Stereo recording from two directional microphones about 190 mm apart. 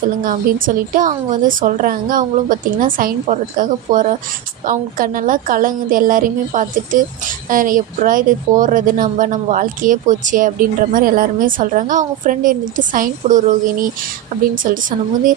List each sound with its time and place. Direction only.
0.2 s a woman's voice: 45° right (ahead or behind)
14.5 s a woman's voice: 45° right (ahead or behind)